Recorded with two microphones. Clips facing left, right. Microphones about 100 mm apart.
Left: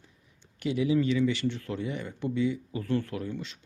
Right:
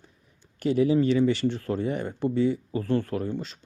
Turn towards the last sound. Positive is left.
turn(degrees=-35)  # may be behind; listen again after turning